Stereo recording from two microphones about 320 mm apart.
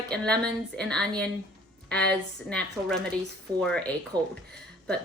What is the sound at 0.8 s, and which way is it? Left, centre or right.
Speech, centre.